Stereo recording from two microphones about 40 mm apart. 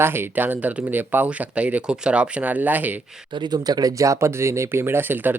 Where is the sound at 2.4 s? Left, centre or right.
Right.